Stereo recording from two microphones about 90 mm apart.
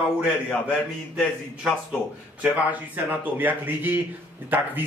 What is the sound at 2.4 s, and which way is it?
A man's voice, 20° right (ahead or behind).